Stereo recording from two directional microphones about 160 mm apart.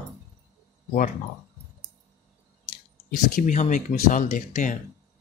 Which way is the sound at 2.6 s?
60° left (ahead or behind).